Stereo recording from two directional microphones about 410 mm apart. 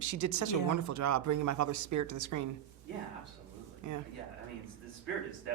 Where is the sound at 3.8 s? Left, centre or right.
Right.